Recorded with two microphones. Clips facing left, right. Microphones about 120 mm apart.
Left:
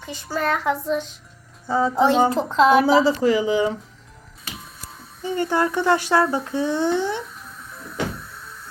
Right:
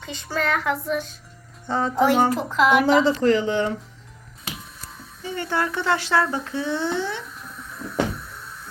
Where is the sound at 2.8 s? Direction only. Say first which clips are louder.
Left 1 dB; 5° left (ahead or behind).